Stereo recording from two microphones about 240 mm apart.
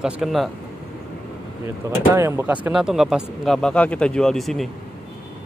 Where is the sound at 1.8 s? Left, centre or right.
Centre.